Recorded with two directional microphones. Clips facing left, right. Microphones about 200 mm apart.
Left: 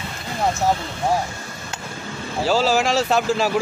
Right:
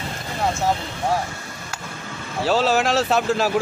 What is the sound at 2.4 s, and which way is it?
Speech, centre (ahead or behind).